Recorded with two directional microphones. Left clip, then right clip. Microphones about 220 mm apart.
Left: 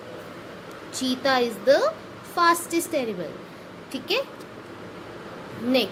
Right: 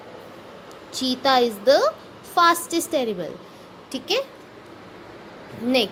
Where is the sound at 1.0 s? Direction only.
20° right (ahead or behind).